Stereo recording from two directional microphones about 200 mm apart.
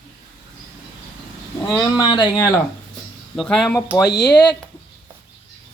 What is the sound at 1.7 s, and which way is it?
Speech, 20° left (ahead or behind).